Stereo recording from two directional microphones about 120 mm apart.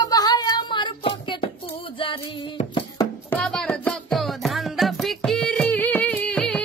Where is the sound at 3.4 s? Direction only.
5° left (ahead or behind).